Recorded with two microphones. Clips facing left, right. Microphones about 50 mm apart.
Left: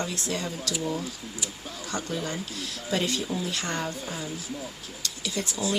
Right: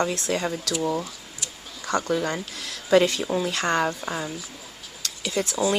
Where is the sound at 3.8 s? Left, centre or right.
Right.